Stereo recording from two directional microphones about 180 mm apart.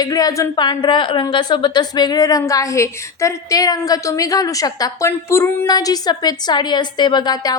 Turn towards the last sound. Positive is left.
turn(degrees=25)  # may be behind; listen again after turning